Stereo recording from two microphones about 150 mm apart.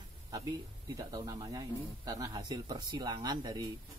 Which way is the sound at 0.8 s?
25° right (ahead or behind).